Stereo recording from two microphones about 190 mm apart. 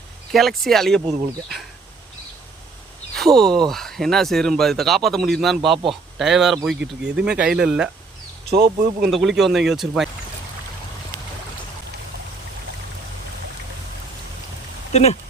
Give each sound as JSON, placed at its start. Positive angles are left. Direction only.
{"t": 0.3, "sound": "speech", "side_deg": 0}
{"t": 3.2, "sound": "speech", "side_deg": 0}
{"t": 8.4, "sound": "speech", "side_deg": -50}
{"t": 9.0, "sound": "speech", "side_deg": 0}